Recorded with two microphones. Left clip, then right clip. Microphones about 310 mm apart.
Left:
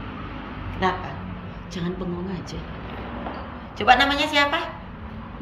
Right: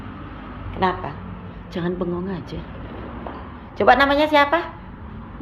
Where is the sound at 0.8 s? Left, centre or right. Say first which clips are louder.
Right 3 dB; centre.